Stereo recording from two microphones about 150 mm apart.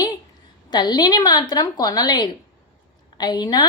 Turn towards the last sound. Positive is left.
turn(degrees=25)  # may be behind; listen again after turning